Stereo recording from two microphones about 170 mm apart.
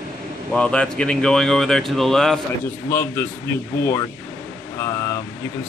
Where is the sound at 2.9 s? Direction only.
15° left (ahead or behind).